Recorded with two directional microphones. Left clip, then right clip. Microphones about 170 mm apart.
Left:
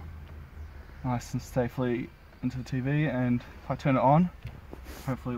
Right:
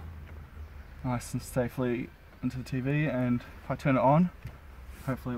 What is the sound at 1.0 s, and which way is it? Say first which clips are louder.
Speech: left 1 dB; 25° left (ahead or behind).